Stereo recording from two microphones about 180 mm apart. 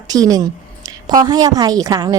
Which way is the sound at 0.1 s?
20° right (ahead or behind).